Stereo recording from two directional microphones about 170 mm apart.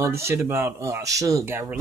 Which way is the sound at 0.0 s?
15° right (ahead or behind).